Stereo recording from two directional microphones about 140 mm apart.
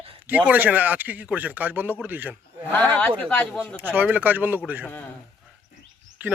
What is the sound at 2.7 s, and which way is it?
Speech, 10° left (ahead or behind).